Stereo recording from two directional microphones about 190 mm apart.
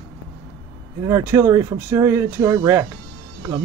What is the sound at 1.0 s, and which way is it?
Speech, 15° right (ahead or behind).